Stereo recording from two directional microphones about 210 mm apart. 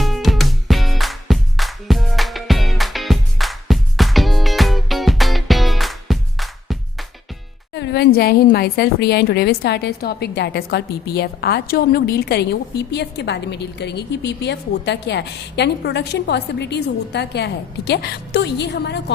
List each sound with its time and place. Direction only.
0.0 s music: centre (ahead or behind)
7.7 s a woman's voice: 55° left (ahead or behind)